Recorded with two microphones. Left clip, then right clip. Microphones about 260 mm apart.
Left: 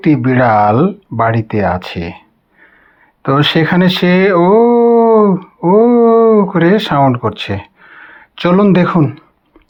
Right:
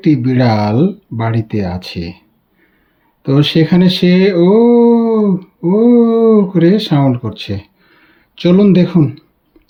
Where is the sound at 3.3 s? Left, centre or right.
Centre.